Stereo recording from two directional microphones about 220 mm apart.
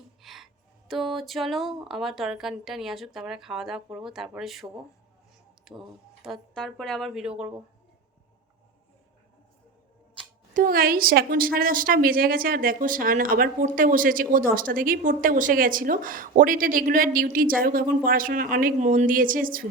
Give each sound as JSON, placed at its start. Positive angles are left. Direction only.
{"t": 0.2, "sound": "music", "side_deg": 0}
{"t": 0.9, "sound": "speech", "side_deg": 0}
{"t": 10.5, "sound": "a woman's voice", "side_deg": -40}